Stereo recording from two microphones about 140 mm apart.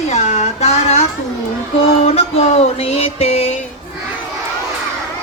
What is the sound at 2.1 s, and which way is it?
Speech, 50° left (ahead or behind).